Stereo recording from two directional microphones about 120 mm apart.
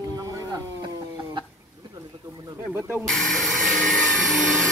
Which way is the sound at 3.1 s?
Centre (ahead or behind).